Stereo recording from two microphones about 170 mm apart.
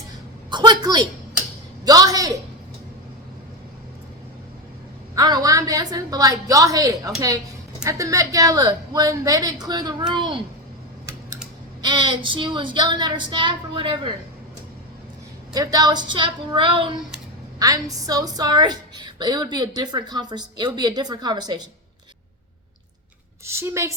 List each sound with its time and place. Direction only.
0.5 s a sound: 25° right (ahead or behind)
5.1 s a woman's voice: 20° right (ahead or behind)
11.8 s a woman's voice: 25° right (ahead or behind)
15.5 s a woman's voice: 20° right (ahead or behind)
23.5 s a woman's voice: 15° right (ahead or behind)